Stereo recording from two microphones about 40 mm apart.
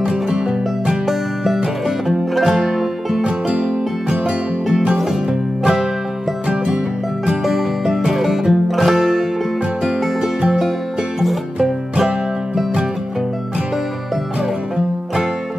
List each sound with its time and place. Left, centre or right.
0.0 s music: centre
1.0 s music: centre
3.5 s music: right
5.6 s music: centre
7.4 s music: centre
9.8 s music: centre